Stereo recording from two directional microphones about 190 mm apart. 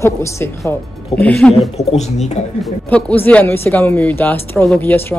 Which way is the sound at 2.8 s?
10° left (ahead or behind).